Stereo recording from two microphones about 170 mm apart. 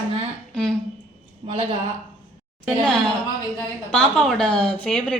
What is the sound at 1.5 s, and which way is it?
Speech, 35° right (ahead or behind).